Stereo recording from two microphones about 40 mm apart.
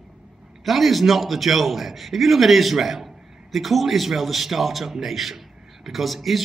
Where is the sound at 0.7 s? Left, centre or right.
Centre.